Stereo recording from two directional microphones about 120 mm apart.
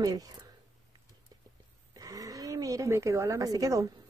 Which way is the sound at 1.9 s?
30° right (ahead or behind).